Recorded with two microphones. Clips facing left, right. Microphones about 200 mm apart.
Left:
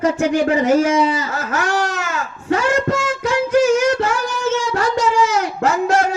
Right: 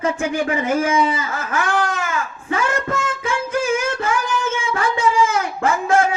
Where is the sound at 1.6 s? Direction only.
55° right (ahead or behind).